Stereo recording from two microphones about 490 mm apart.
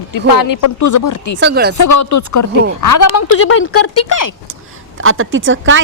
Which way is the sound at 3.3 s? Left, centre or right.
Left.